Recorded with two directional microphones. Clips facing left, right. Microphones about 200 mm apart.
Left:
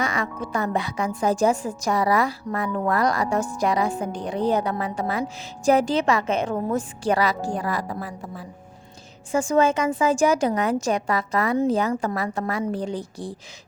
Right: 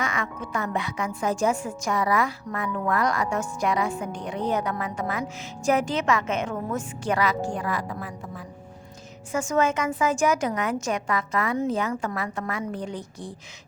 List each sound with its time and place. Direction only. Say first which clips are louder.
0.0 s a woman's voice: left 3 dB; 35° left (ahead or behind)
9.3 s a woman's voice: left 4 dB; 30° left (ahead or behind)